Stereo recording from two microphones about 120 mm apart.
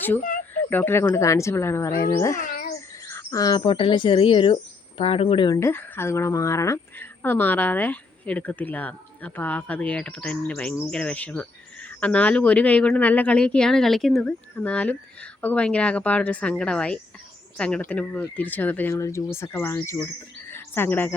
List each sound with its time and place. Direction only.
0.5 s speech: 15° left (ahead or behind)
3.1 s bird: 25° left (ahead or behind)
3.6 s speech: 45° left (ahead or behind)
5.5 s speech: 20° left (ahead or behind)
18.9 s speech: 25° left (ahead or behind)